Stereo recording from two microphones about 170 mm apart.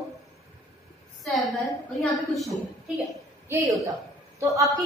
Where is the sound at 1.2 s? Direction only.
Centre (ahead or behind).